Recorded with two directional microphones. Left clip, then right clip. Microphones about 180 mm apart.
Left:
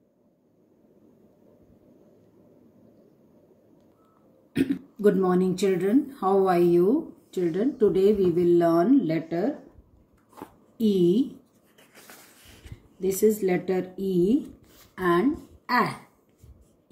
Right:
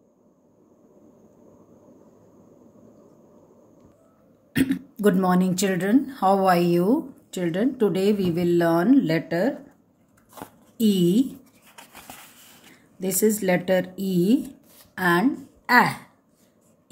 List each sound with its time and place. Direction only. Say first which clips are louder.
5.2 s speech: even; 45° right (ahead or behind)
10.8 s speech: right 1 dB; 35° right (ahead or behind)
13.0 s a woman's voice: even; 40° right (ahead or behind)